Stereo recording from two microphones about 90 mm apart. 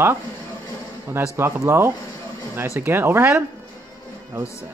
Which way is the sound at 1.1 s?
30° right (ahead or behind).